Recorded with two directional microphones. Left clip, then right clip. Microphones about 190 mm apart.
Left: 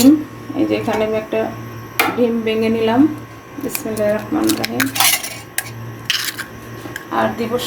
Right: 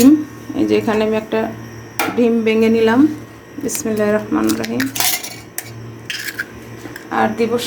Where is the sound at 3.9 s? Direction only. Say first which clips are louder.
Right 1 dB; 40° right (ahead or behind).